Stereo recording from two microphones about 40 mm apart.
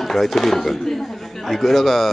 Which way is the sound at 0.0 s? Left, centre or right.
Centre.